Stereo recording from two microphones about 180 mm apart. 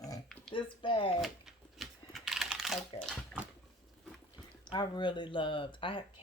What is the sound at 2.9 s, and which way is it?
Speech, 5° left (ahead or behind).